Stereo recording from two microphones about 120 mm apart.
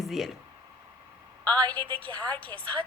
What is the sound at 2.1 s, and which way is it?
Speech, 10° left (ahead or behind).